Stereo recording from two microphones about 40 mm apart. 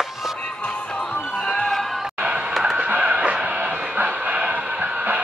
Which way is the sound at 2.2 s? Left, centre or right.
Right.